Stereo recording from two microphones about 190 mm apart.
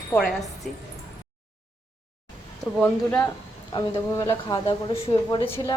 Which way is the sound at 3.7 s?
15° left (ahead or behind).